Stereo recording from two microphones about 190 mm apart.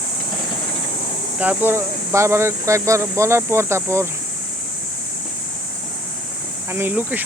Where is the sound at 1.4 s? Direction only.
10° right (ahead or behind).